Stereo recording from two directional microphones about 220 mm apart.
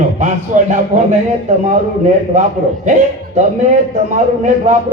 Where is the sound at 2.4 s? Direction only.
35° right (ahead or behind).